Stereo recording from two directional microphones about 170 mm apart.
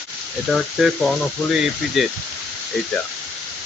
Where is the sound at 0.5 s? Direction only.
Centre (ahead or behind).